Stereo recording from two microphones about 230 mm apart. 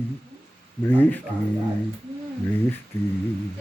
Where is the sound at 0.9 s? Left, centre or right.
Centre.